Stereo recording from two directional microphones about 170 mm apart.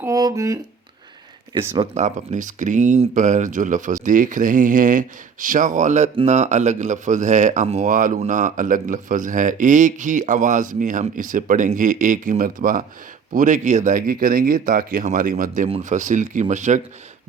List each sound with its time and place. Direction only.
0.0 s speech: 20° right (ahead or behind)
1.8 s speech: 45° right (ahead or behind)